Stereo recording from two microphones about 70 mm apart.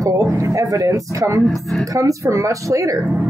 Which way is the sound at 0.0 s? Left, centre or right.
Right.